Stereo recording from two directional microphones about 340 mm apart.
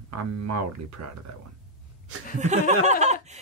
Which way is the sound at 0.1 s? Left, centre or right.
Right.